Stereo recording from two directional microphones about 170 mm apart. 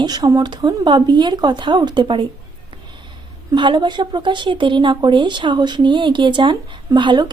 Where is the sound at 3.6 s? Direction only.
25° right (ahead or behind).